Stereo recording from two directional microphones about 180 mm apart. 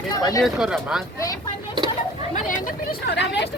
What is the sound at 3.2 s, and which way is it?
Speech, 75° left (ahead or behind).